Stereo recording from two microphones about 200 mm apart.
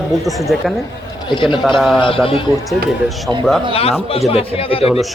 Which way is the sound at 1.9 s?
25° left (ahead or behind).